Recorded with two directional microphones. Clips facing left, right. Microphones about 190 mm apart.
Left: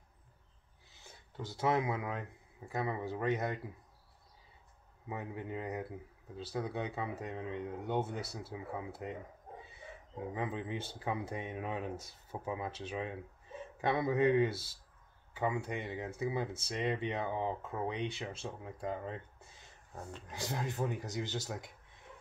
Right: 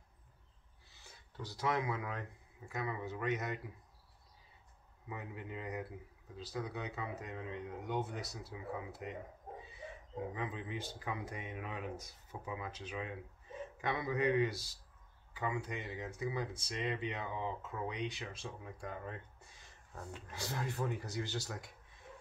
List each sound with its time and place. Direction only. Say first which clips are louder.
1.3 s speech: left 4 dB; 25° left (ahead or behind)
5.0 s speech: left 5 dB; 25° left (ahead or behind)
10.3 s speech: left 4 dB; 25° left (ahead or behind)